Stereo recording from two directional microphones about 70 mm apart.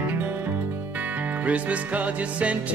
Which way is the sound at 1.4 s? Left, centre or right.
Centre.